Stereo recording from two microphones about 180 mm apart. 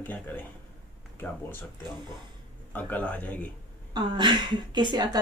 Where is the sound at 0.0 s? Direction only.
10° left (ahead or behind).